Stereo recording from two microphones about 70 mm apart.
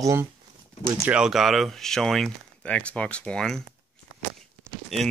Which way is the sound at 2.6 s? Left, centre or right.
Centre.